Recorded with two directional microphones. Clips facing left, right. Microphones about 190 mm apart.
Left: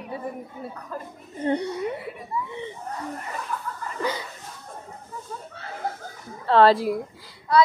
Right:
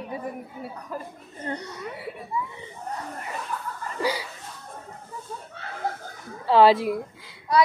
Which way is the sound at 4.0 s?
10° right (ahead or behind).